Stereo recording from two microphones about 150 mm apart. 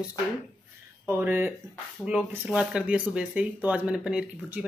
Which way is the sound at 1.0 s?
15° right (ahead or behind).